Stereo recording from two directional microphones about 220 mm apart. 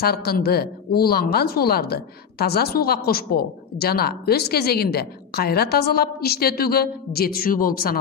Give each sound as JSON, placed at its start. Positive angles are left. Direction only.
{"t": 0.0, "sound": "speech", "side_deg": 45}